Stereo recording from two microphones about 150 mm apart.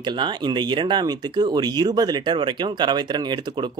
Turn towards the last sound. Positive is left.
turn(degrees=-30)  # may be behind; listen again after turning